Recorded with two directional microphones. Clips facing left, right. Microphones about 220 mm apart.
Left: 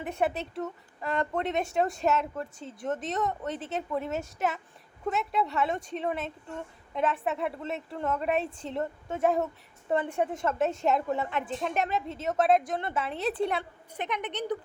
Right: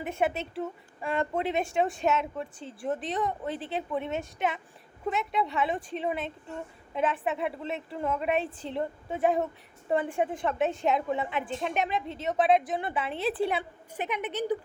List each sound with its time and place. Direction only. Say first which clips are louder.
0.1 s a woman's voice: even; 5° right (ahead or behind)